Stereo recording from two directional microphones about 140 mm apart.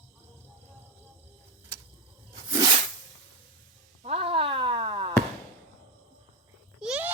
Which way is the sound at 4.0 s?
45° right (ahead or behind).